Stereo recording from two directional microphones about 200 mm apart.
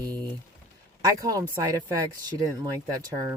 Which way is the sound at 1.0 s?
15° right (ahead or behind).